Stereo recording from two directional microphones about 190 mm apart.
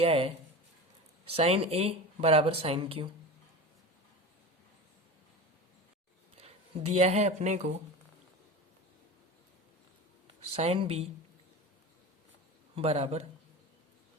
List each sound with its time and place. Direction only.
0.0 s speech: 30° right (ahead or behind)
6.9 s speech: 35° right (ahead or behind)
10.5 s speech: 30° right (ahead or behind)
12.7 s speech: 30° right (ahead or behind)